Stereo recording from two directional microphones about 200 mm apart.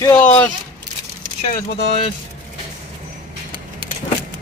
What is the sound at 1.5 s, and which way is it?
Speech, 30° left (ahead or behind).